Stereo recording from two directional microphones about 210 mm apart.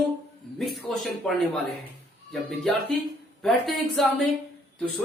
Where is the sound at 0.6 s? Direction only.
Centre (ahead or behind).